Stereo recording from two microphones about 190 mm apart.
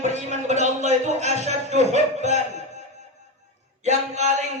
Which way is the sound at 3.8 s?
35° right (ahead or behind).